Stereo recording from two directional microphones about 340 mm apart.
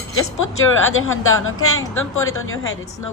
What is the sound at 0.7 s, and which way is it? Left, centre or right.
A woman's voice, left.